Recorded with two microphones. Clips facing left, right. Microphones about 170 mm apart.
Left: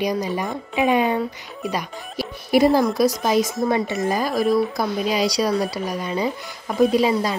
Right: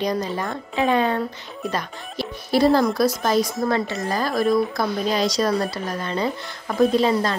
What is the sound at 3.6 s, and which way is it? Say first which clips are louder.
Speech: left 2 dB; 20° left (ahead or behind).